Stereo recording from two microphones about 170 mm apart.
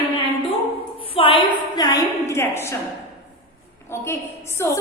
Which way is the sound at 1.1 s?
30° left (ahead or behind).